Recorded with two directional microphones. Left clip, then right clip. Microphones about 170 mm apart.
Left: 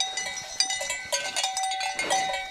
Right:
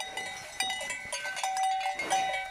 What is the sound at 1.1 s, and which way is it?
Cowbell, 65° left (ahead or behind).